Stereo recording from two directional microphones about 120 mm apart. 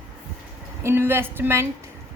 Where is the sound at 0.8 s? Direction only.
20° right (ahead or behind).